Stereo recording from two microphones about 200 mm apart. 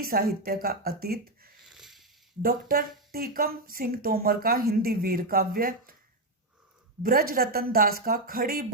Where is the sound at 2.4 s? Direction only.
45° right (ahead or behind).